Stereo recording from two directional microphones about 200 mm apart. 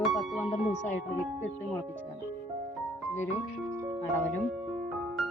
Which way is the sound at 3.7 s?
15° right (ahead or behind).